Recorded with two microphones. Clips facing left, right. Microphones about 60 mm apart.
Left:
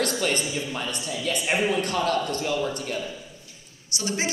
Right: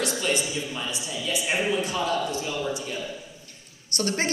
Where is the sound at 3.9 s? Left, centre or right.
Right.